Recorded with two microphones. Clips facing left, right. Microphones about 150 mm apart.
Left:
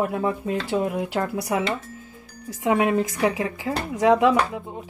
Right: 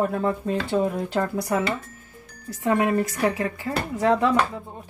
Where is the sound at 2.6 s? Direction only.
15° left (ahead or behind).